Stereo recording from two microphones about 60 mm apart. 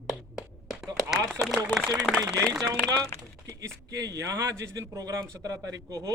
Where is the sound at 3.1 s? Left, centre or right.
Left.